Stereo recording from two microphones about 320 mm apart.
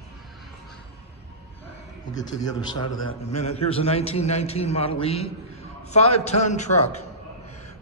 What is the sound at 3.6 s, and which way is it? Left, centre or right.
A man's voice, centre.